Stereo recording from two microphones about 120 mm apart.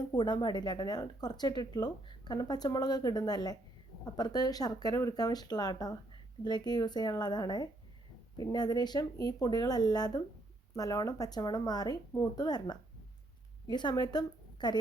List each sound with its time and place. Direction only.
0.1 s a woman's voice: 35° left (ahead or behind)